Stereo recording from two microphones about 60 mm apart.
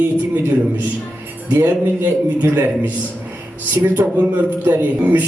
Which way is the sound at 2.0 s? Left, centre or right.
Right.